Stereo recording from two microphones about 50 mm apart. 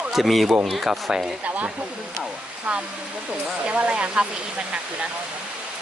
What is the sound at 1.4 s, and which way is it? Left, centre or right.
Speech, right.